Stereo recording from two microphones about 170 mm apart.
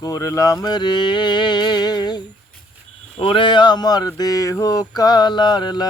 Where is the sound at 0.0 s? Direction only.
20° left (ahead or behind).